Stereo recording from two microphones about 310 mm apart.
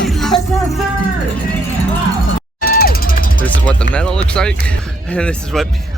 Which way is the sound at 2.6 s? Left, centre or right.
Left.